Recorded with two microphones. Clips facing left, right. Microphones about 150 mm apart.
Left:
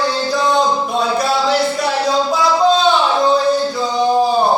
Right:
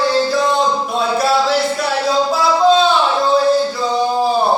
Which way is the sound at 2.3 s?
Centre (ahead or behind).